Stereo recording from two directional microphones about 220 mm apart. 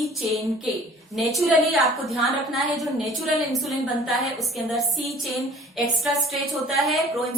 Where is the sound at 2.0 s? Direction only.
Centre (ahead or behind).